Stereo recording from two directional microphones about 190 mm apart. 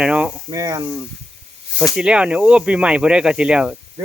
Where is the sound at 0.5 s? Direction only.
15° right (ahead or behind).